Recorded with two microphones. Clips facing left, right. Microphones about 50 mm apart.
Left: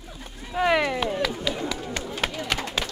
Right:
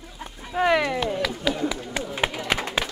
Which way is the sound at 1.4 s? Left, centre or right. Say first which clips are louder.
Right 3 dB; centre.